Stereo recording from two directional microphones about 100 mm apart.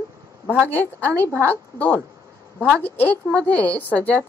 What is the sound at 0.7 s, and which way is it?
A woman's voice, 15° left (ahead or behind).